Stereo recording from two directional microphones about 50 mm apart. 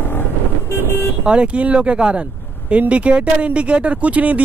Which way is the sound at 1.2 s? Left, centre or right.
Right.